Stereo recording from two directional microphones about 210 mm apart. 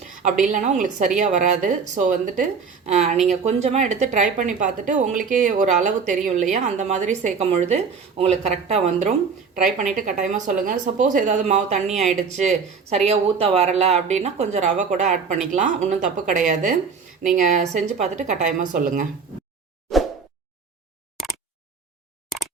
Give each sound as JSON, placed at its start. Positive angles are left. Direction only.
{"t": 0.4, "sound": "a woman's voice", "side_deg": -35}